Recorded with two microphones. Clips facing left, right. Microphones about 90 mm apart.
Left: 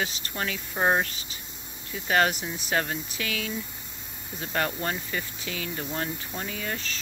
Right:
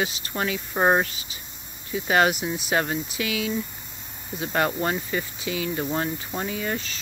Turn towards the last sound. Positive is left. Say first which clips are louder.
# right 5 dB
turn(degrees=-15)  # may be behind; listen again after turning